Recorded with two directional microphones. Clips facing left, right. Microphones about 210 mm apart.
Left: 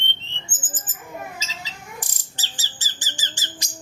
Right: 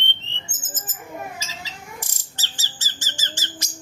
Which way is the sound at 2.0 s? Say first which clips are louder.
Even; 15° left (ahead or behind).